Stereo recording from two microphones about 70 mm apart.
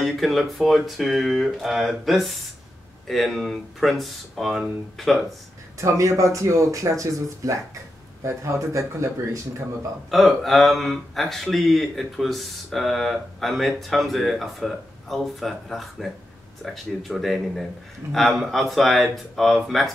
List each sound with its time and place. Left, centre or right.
0.0 s speech: centre
5.8 s speech: right
10.1 s speech: centre